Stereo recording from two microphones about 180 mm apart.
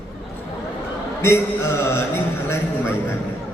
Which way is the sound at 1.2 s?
15° left (ahead or behind).